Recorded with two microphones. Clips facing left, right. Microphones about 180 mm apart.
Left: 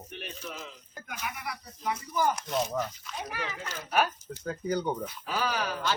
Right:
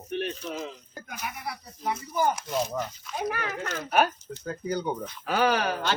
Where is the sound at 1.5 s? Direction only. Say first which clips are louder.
Right 3 dB; 30° right (ahead or behind).